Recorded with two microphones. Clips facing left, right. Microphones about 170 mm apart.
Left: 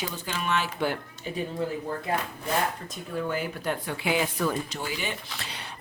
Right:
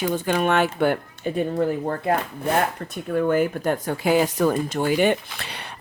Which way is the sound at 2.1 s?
60° right (ahead or behind).